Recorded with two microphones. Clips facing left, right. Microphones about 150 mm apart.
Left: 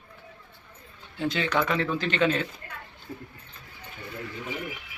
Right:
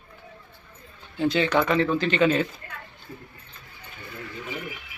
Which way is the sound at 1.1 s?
Centre (ahead or behind).